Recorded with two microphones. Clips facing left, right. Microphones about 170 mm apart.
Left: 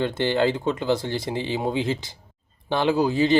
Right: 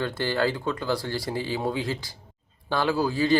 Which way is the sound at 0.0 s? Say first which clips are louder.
Left 4 dB; 20° left (ahead or behind).